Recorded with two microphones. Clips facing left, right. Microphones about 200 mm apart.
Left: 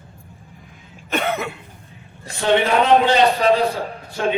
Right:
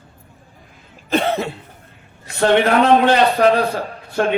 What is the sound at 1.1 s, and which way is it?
Cough, 30° right (ahead or behind).